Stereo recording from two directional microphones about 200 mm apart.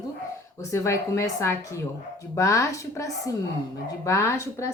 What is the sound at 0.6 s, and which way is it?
A woman's voice, 15° left (ahead or behind).